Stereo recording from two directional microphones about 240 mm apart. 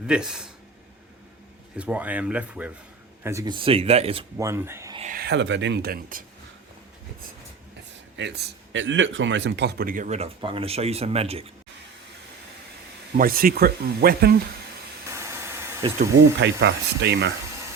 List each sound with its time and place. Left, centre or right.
0.1 s speech: centre
1.7 s speech: centre
4.9 s a man's voice: right
8.2 s a man's voice: right
13.1 s a man's voice: right
15.1 s steam: centre
16.1 s speech: right